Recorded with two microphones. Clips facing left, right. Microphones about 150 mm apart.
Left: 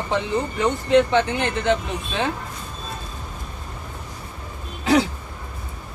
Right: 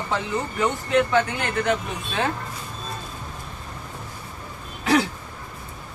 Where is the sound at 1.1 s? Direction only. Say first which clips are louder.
Left 2 dB; 25° left (ahead or behind).